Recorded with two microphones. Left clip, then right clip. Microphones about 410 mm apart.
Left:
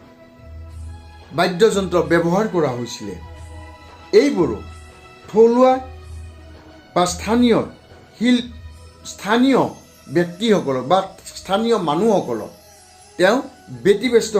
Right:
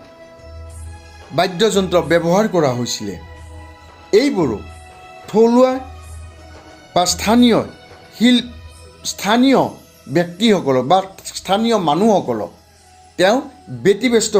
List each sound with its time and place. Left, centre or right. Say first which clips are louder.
1.4 s speech: even; right
6.9 s speech: right 3 dB; right